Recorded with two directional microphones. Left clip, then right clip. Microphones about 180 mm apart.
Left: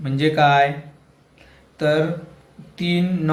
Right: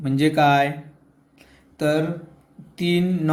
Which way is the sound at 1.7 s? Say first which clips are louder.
Left 3 dB; 45° right (ahead or behind).